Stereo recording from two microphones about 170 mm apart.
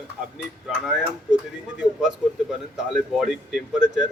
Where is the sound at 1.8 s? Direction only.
5° right (ahead or behind).